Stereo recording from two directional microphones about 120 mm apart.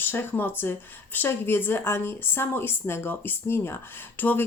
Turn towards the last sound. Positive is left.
turn(degrees=15)  # may be behind; listen again after turning